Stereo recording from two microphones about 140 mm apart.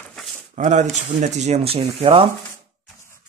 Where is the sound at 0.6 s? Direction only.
60° right (ahead or behind); by 2.3 s 40° right (ahead or behind).